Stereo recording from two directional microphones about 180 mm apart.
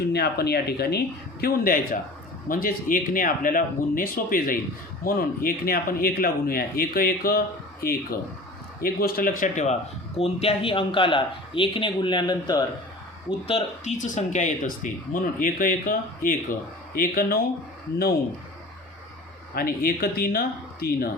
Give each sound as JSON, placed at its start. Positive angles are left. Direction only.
{"t": 0.1, "sound": "speech", "side_deg": 60}
{"t": 10.2, "sound": "speech", "side_deg": 35}
{"t": 13.5, "sound": "speech", "side_deg": 40}
{"t": 19.5, "sound": "speech", "side_deg": 55}